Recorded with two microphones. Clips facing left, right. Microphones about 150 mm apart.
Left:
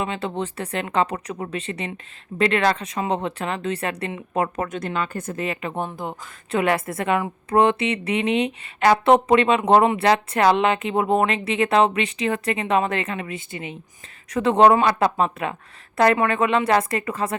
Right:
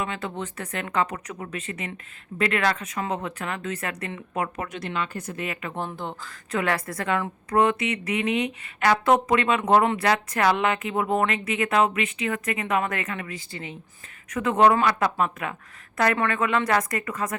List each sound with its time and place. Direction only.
0.0 s a woman's voice: 25° left (ahead or behind)
4.4 s a woman's voice: 45° left (ahead or behind)
5.5 s speech: 20° left (ahead or behind)
6.5 s a woman's voice: 25° left (ahead or behind)
14.3 s a woman's voice: 35° left (ahead or behind)